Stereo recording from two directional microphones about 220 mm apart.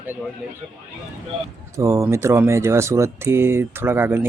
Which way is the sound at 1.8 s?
15° right (ahead or behind).